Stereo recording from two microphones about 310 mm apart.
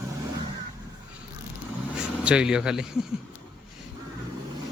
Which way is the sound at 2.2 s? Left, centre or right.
Centre.